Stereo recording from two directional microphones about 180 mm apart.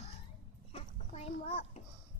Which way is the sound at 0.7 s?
35° left (ahead or behind).